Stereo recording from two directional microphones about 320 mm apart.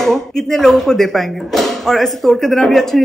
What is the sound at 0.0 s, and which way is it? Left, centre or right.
A woman's voice, centre.